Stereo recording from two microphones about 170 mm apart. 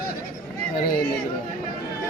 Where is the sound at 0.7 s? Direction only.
55° left (ahead or behind).